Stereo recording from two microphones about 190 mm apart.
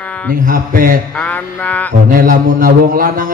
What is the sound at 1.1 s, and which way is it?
Mantra, 10° left (ahead or behind).